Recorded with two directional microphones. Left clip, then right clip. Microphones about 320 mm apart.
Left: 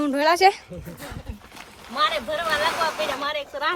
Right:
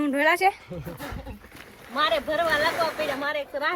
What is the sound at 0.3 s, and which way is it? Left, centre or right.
Speech, left.